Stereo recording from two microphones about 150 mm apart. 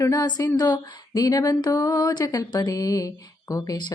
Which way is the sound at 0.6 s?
25° left (ahead or behind).